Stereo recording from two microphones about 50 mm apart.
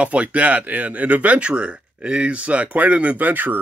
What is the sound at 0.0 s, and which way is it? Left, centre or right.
Speech, right.